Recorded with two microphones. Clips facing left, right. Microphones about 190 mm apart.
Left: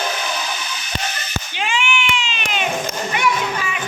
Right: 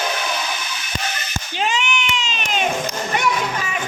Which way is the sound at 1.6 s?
40° right (ahead or behind).